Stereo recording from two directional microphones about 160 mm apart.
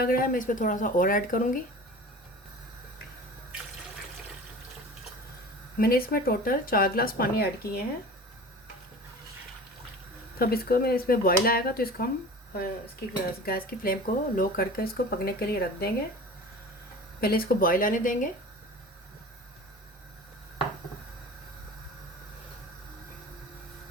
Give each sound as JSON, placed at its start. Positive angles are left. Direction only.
{"t": 0.0, "sound": "speech", "side_deg": 60}
{"t": 5.7, "sound": "speech", "side_deg": 70}
{"t": 10.3, "sound": "speech", "side_deg": 70}
{"t": 17.2, "sound": "speech", "side_deg": 70}